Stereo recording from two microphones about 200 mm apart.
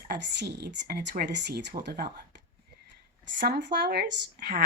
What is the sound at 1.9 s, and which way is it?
Speech, 50° right (ahead or behind).